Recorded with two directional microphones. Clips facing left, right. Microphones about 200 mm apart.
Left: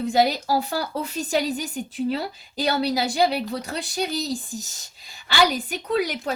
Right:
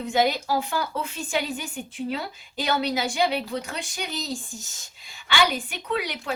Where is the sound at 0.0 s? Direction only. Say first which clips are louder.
Left 2 dB; 40° left (ahead or behind).